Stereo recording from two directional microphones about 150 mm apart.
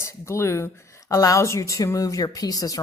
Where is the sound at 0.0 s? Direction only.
20° left (ahead or behind).